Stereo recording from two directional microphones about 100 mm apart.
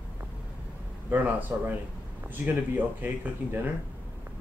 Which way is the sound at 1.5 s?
25° right (ahead or behind).